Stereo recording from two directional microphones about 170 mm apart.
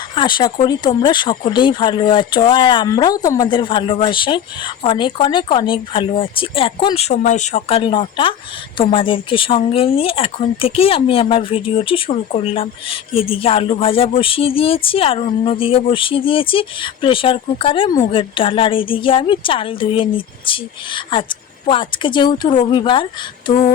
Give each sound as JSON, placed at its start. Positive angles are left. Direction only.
{"t": 0.2, "sound": "speech", "side_deg": 25}